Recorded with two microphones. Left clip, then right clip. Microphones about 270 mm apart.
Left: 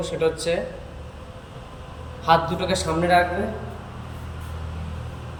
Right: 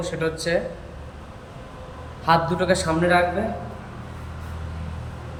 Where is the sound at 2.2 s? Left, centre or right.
Centre.